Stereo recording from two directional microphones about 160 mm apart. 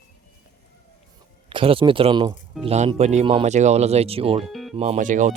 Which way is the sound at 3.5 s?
45° right (ahead or behind).